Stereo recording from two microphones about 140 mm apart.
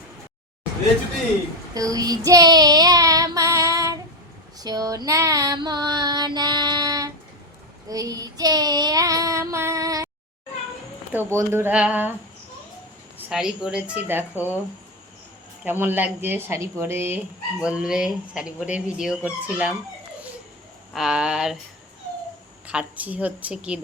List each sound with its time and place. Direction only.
1.7 s child singing: 25° right (ahead or behind)
11.1 s speech: 15° right (ahead or behind)
13.1 s speech: 10° right (ahead or behind)
15.6 s speech: 15° right (ahead or behind)
17.6 s speech: 5° right (ahead or behind)
20.9 s speech: 5° right (ahead or behind)
22.6 s speech: 10° right (ahead or behind)